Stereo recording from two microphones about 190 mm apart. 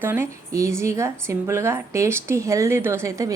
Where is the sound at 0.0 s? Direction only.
10° right (ahead or behind).